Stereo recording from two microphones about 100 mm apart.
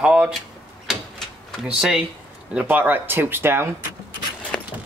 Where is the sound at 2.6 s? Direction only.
20° right (ahead or behind).